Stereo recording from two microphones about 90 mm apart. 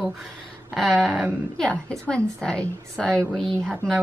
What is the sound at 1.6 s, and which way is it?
A woman's voice, 10° left (ahead or behind).